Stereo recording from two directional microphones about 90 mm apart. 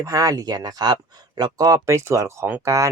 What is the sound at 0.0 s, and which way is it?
Speech, 40° right (ahead or behind).